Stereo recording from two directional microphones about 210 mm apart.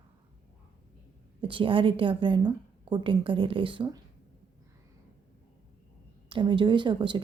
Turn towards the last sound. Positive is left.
turn(degrees=-20)  # may be behind; listen again after turning